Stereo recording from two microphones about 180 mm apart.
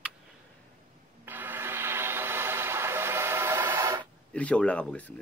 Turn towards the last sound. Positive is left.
turn(degrees=5)  # may be behind; listen again after turning